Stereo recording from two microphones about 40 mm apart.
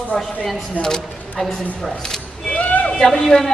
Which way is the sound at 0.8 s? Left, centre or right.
Left.